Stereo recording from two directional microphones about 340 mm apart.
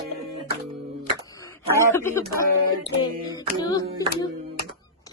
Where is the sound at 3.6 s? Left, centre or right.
Centre.